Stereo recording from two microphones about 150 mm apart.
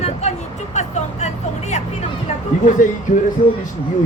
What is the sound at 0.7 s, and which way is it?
Vehicle, 50° left (ahead or behind).